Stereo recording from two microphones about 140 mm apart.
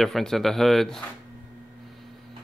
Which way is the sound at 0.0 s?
Centre (ahead or behind).